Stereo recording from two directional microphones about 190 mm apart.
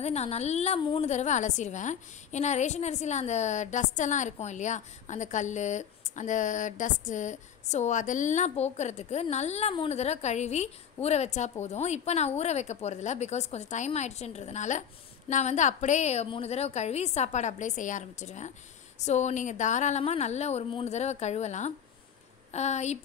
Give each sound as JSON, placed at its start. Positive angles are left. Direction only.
{"t": 0.0, "sound": "a woman's voice", "side_deg": 35}